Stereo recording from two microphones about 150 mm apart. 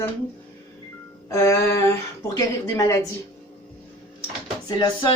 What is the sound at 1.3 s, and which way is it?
Speech, 20° left (ahead or behind).